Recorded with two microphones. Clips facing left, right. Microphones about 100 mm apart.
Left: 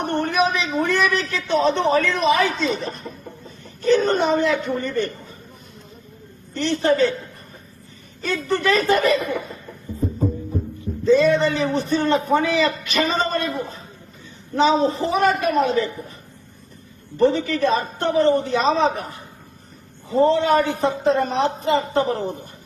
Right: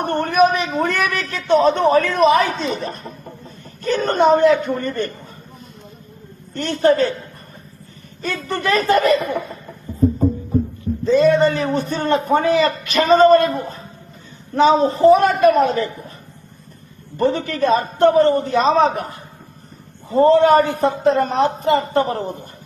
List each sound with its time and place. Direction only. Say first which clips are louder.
0.0 s a man's voice: right 5 dB; 50° right (ahead or behind)
6.5 s a man's voice: right 3 dB; 45° right (ahead or behind)
8.5 s a man's voice: right 2 dB; 50° right (ahead or behind)
10.0 s music: right 9 dB; centre (ahead or behind)
11.0 s a man's voice: right 2 dB; 45° right (ahead or behind)
17.2 s a man's voice: even; 50° right (ahead or behind)